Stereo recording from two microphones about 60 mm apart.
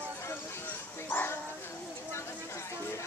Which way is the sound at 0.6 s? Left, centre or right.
Left.